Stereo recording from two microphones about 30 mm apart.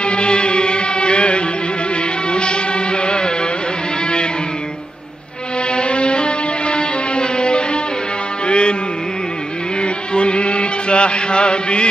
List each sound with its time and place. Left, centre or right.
0.0 s music: left
5.7 s music: left
9.8 s mantra: left